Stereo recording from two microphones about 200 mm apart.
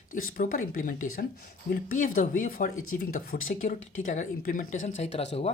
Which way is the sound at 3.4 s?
40° left (ahead or behind).